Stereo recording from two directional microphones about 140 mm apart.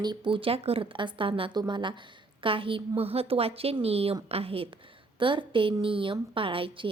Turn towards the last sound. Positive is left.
turn(degrees=-40)  # may be behind; listen again after turning